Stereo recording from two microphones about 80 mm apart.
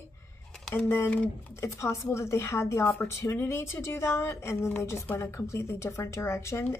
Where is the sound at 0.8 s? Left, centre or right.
Left.